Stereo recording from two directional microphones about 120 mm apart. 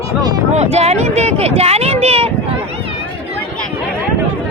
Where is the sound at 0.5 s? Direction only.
65° right (ahead or behind).